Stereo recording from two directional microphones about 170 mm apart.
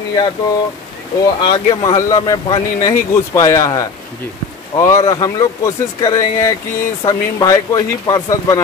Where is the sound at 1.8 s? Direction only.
20° left (ahead or behind).